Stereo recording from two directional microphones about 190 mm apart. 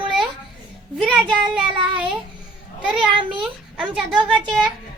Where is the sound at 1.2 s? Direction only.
25° right (ahead or behind).